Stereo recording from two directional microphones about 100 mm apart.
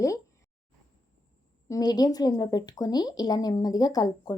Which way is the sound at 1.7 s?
40° left (ahead or behind).